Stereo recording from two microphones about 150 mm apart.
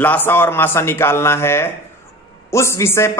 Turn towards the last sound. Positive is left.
turn(degrees=15)  # may be behind; listen again after turning